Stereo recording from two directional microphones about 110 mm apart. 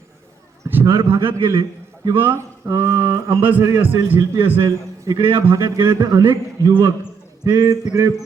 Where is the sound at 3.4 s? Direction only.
15° right (ahead or behind).